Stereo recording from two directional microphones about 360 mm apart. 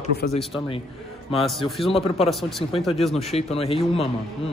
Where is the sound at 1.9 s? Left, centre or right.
Centre.